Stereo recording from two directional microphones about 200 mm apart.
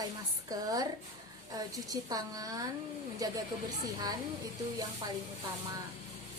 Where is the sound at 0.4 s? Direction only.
20° right (ahead or behind).